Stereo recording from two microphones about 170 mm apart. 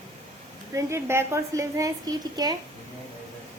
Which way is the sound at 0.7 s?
15° right (ahead or behind).